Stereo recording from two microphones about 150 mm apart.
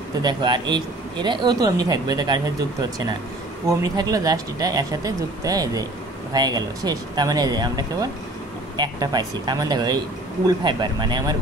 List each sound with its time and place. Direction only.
0.2 s speech: 30° right (ahead or behind)